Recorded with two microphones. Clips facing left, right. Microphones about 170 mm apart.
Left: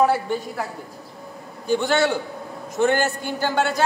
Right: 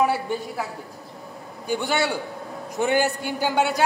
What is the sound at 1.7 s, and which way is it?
A man's voice, 10° right (ahead or behind).